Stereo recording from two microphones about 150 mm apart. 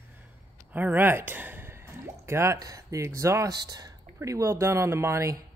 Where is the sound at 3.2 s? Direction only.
20° right (ahead or behind).